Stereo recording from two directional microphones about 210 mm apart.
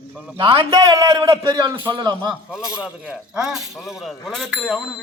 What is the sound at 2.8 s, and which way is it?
Speech, 5° right (ahead or behind).